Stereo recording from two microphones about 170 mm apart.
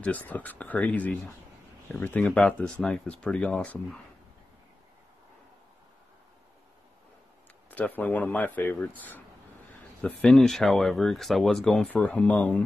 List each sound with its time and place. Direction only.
0.0 s speech: 10° left (ahead or behind)
7.7 s speech: 10° left (ahead or behind)